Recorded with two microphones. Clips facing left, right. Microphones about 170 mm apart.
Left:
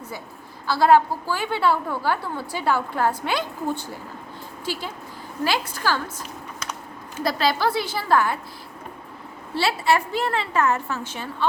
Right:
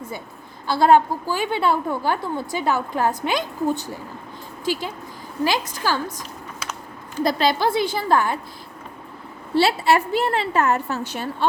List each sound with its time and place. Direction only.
0.7 s a woman's voice: 25° right (ahead or behind)
6.1 s a sound: 5° right (ahead or behind)
7.2 s a woman's voice: 20° right (ahead or behind)
9.6 s a woman's voice: 30° right (ahead or behind)